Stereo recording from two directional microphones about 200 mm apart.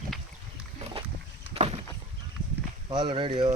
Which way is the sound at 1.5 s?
30° right (ahead or behind).